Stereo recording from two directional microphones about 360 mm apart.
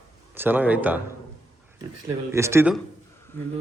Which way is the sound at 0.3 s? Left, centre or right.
Centre.